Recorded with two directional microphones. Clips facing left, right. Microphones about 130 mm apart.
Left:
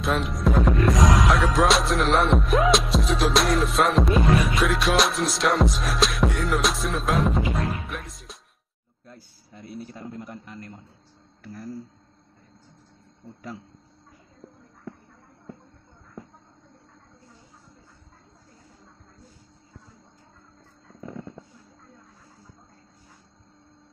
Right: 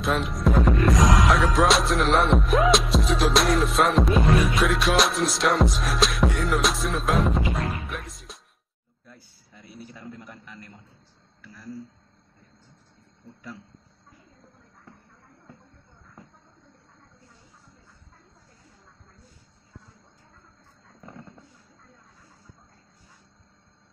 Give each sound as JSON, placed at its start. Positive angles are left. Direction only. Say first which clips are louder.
{"t": 0.0, "sound": "music", "louder": "even", "side_deg": 0}
{"t": 9.0, "sound": "a sound", "louder": "left 4 dB", "side_deg": 35}
{"t": 9.9, "sound": "a man's voice", "louder": "left 4 dB", "side_deg": 35}
{"t": 11.4, "sound": "speech", "louder": "left 5 dB", "side_deg": 50}